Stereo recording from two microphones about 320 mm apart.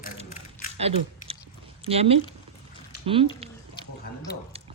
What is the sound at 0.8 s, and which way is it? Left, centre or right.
Chewing, centre.